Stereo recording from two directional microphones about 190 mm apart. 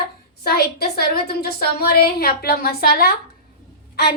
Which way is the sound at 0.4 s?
55° left (ahead or behind).